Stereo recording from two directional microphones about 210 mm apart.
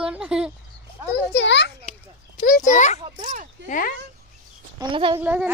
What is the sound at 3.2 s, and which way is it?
Speech, 40° right (ahead or behind).